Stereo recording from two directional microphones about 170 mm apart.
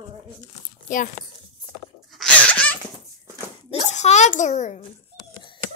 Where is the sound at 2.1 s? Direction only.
5° left (ahead or behind).